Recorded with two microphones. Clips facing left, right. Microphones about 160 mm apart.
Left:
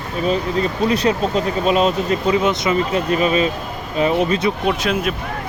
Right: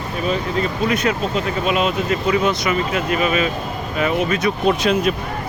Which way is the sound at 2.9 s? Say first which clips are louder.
Left 2 dB; 35° left (ahead or behind).